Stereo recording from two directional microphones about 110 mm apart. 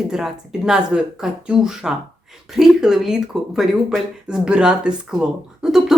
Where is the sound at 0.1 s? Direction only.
5° right (ahead or behind).